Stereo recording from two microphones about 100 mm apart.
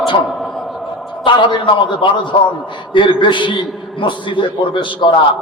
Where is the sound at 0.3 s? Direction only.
Centre (ahead or behind).